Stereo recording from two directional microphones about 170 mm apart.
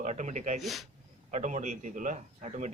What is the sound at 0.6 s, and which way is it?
Speech, centre (ahead or behind).